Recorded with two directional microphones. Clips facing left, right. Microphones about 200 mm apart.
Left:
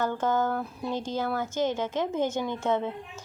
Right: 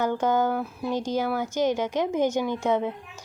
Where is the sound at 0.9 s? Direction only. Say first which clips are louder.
Right 4 dB; 15° right (ahead or behind).